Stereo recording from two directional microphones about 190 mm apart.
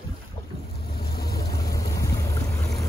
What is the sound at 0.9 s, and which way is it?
Vehicle, 55° left (ahead or behind).